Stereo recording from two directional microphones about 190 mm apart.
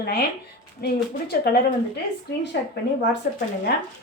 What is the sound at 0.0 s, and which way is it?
A woman's voice, 55° left (ahead or behind).